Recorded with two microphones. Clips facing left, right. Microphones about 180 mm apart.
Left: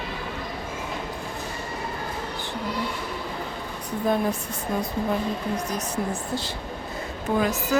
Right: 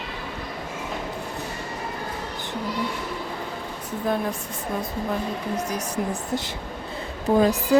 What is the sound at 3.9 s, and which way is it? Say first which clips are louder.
Speech: left 2 dB; centre (ahead or behind).